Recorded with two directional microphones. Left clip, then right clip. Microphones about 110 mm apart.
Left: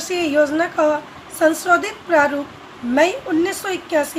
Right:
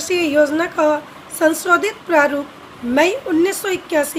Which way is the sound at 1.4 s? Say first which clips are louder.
Right 1 dB; 90° right.